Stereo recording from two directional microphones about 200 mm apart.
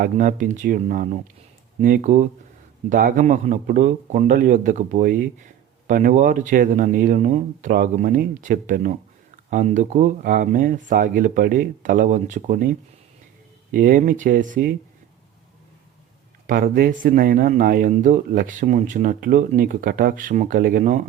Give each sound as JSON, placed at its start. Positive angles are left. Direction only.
{"t": 0.0, "sound": "speech", "side_deg": -40}
{"t": 16.5, "sound": "speech", "side_deg": -45}